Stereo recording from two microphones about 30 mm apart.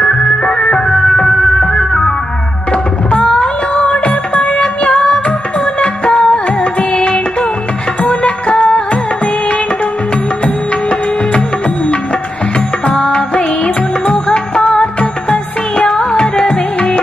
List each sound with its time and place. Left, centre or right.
0.0 s music: left
2.7 s tabla: left
3.8 s music: left
10.4 s music: left
12.9 s music: left